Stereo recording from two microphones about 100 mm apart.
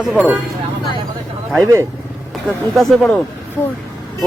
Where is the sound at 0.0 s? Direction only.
5° right (ahead or behind).